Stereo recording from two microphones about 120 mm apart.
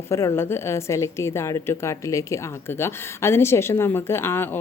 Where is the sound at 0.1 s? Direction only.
25° left (ahead or behind).